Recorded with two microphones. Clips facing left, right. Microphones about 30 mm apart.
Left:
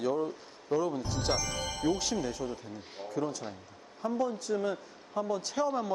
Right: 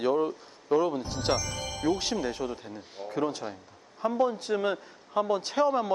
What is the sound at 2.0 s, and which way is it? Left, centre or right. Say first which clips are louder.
A man's voice: right 3 dB; right.